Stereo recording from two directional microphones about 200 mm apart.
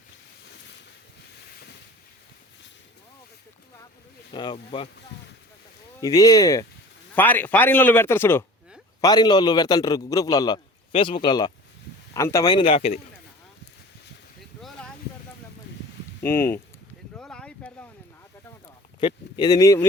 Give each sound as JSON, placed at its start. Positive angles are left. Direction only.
{"t": 4.3, "sound": "a man's voice", "side_deg": 25}
{"t": 6.0, "sound": "a man's voice", "side_deg": 20}
{"t": 16.2, "sound": "speech", "side_deg": 10}
{"t": 17.2, "sound": "a sound", "side_deg": 5}
{"t": 18.9, "sound": "speech", "side_deg": 25}